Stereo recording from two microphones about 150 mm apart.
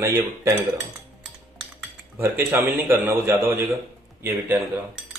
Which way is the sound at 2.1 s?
15° right (ahead or behind).